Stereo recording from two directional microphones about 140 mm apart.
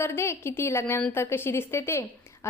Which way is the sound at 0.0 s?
20° left (ahead or behind).